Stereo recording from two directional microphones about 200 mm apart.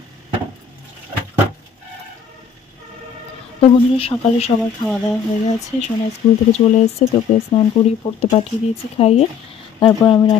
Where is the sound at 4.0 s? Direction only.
30° left (ahead or behind).